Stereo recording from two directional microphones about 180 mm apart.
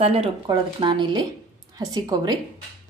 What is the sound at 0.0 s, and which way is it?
Speech, 35° right (ahead or behind).